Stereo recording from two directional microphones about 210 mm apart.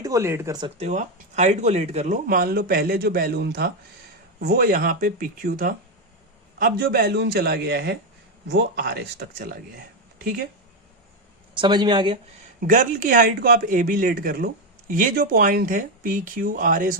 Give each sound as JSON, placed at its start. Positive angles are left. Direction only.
{"t": 0.0, "sound": "speech", "side_deg": -15}
{"t": 0.8, "sound": "speech", "side_deg": -35}
{"t": 11.6, "sound": "speech", "side_deg": -20}
{"t": 12.1, "sound": "speech", "side_deg": -35}